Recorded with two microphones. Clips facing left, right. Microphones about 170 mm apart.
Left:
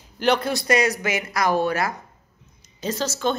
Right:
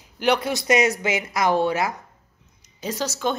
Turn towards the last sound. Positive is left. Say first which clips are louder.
# left 1 dB
turn(degrees=-15)  # may be behind; listen again after turning